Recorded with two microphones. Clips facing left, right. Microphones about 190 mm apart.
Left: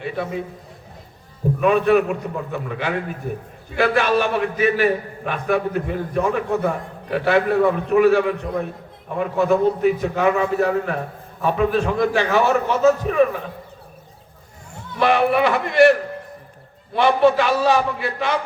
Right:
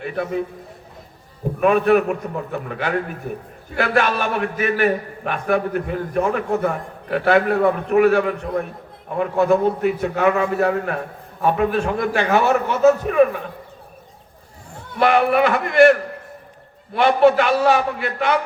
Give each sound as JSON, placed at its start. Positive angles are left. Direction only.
{"t": 0.0, "sound": "a man's voice", "side_deg": -50}
{"t": 1.6, "sound": "a man's voice", "side_deg": -50}
{"t": 14.9, "sound": "a man's voice", "side_deg": -55}
{"t": 17.0, "sound": "a man's voice", "side_deg": -55}